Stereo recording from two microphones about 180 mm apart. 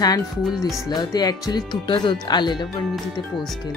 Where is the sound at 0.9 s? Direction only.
20° left (ahead or behind).